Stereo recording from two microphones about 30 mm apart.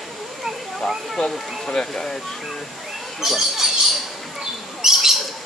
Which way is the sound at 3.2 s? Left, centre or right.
Centre.